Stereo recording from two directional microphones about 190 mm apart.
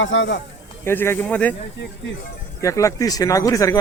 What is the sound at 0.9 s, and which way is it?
Speech, 10° left (ahead or behind).